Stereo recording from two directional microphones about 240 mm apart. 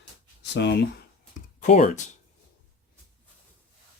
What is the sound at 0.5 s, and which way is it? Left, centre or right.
Speech, left.